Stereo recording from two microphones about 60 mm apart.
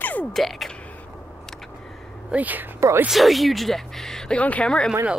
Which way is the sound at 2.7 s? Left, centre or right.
Right.